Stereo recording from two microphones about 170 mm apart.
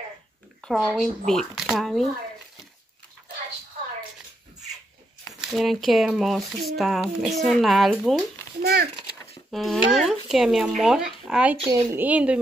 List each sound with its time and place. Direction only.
0.6 s speech: centre (ahead or behind)
5.4 s speech: centre (ahead or behind)
8.5 s a child's voice: 65° right (ahead or behind)
9.5 s speech: centre (ahead or behind)